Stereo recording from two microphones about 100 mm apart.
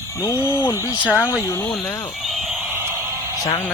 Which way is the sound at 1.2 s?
25° left (ahead or behind).